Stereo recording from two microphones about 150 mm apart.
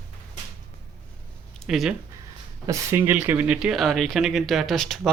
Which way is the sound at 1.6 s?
Centre (ahead or behind).